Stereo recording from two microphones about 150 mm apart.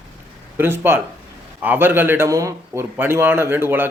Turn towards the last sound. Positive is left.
turn(degrees=-15)  # may be behind; listen again after turning